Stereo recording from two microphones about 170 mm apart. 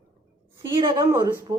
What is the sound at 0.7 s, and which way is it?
Speech, 30° right (ahead or behind).